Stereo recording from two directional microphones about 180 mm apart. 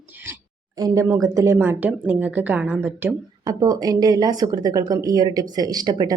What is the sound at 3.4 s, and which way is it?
A woman's voice, 20° right (ahead or behind).